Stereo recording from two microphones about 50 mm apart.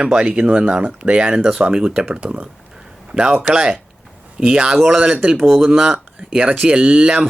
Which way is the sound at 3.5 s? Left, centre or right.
Centre.